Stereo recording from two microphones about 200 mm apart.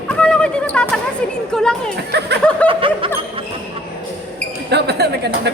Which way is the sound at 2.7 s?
25° right (ahead or behind).